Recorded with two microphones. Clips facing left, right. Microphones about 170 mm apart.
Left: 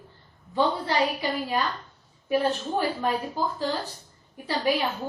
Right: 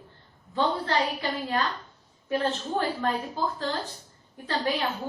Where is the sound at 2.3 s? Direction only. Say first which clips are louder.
Left 3 dB; 10° left (ahead or behind).